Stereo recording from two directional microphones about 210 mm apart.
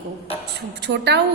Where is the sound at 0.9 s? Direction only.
50° right (ahead or behind).